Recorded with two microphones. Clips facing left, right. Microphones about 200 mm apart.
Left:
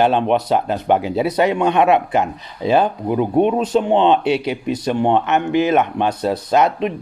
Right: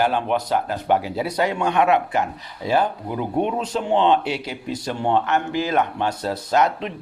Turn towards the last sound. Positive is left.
turn(degrees=20)  # may be behind; listen again after turning